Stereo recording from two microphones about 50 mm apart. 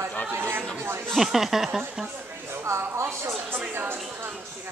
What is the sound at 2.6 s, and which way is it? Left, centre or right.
Speech, right.